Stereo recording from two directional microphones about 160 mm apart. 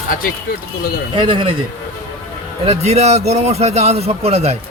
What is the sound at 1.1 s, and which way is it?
Speech, 30° right (ahead or behind).